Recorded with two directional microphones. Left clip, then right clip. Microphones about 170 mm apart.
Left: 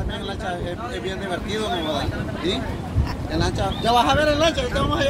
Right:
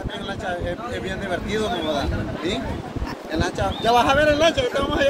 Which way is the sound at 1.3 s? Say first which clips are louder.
Right 3 dB; 5° right (ahead or behind).